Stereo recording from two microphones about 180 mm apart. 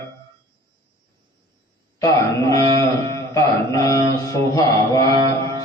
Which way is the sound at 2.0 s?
20° left (ahead or behind).